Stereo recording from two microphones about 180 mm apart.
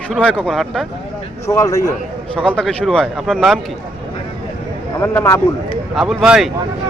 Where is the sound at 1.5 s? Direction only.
20° left (ahead or behind).